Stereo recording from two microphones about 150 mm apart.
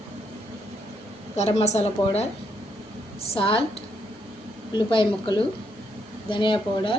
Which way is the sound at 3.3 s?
35° left (ahead or behind).